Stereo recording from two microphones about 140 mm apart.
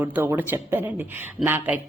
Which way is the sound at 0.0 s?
15° right (ahead or behind).